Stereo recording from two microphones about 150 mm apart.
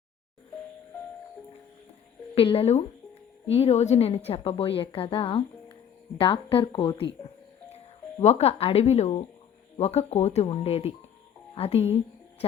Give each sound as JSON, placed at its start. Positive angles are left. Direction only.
{"t": 2.3, "sound": "a woman's voice", "side_deg": 40}
{"t": 8.2, "sound": "a woman's voice", "side_deg": 45}